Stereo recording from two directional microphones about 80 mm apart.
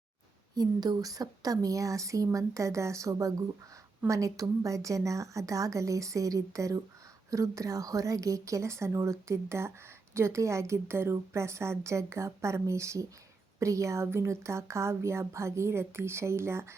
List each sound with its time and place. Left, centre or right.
0.5 s speech: right